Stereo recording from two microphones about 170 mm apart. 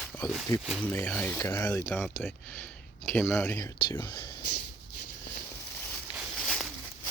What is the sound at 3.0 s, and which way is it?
Speech, 10° left (ahead or behind).